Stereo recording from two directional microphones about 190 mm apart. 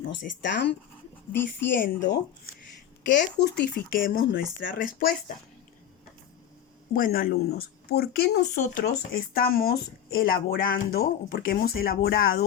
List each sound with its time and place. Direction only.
0.4 s speech: 65° left (ahead or behind)
3.4 s speech: 55° left (ahead or behind)
6.9 s speech: 50° left (ahead or behind)